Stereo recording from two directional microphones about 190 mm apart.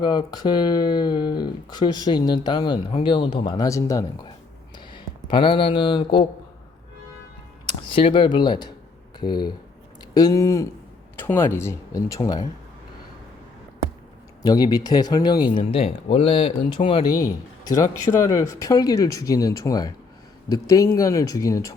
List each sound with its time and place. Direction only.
0.0 s speech: 20° left (ahead or behind)
7.9 s speech: 25° left (ahead or behind)
14.4 s speech: 20° left (ahead or behind)